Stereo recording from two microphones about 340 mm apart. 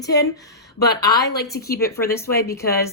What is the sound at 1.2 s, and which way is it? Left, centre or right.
Speech, left.